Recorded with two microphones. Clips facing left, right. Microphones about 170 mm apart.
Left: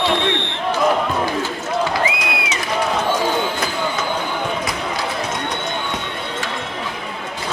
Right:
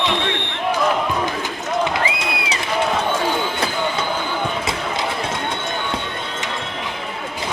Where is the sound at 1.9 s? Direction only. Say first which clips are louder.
Left 1 dB; 25° right (ahead or behind).